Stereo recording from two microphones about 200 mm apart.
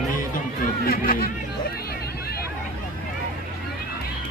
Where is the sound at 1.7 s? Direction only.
50° left (ahead or behind).